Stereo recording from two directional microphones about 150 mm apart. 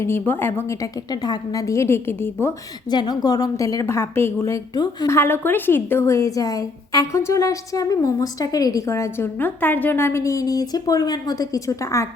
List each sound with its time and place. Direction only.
0.0 s a woman's voice: 15° left (ahead or behind)
2.9 s a woman's voice: 30° left (ahead or behind)